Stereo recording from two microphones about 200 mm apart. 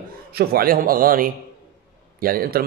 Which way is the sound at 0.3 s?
50° right (ahead or behind).